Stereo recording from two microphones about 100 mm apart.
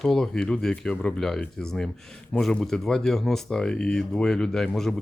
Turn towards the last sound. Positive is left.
turn(degrees=5)  # may be behind; listen again after turning